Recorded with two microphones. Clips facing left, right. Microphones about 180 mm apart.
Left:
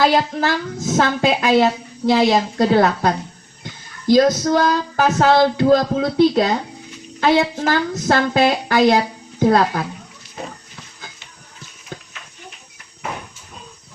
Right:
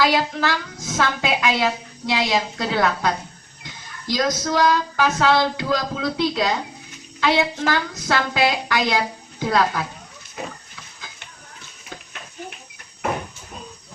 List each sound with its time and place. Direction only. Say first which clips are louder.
0.0 s a woman's voice: left 3 dB; 40° left (ahead or behind)
4.4 s a woman's voice: left 2 dB; 40° left (ahead or behind)